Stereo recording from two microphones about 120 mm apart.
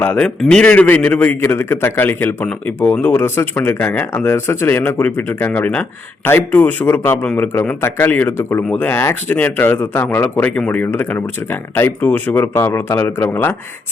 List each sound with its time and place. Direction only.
0.0 s a man's voice: 15° left (ahead or behind)